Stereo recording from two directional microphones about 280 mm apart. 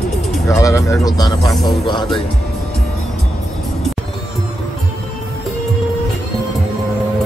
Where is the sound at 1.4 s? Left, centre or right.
Centre.